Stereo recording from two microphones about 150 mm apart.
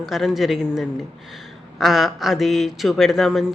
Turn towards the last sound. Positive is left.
turn(degrees=0)  # may be behind; listen again after turning